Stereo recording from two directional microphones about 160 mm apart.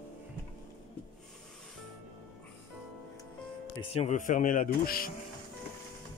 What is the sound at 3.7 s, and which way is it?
Speech, 40° left (ahead or behind).